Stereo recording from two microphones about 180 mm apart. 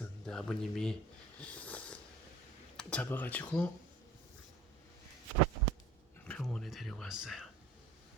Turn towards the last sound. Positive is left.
turn(degrees=0)  # may be behind; listen again after turning